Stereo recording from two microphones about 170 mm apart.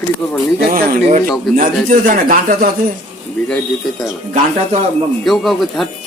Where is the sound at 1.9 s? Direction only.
55° right (ahead or behind).